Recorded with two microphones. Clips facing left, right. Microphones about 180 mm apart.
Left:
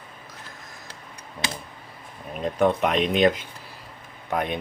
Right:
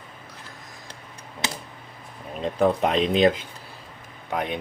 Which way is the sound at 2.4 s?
35° right (ahead or behind).